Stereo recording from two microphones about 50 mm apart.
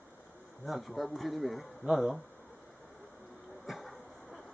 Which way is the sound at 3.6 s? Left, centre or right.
Centre.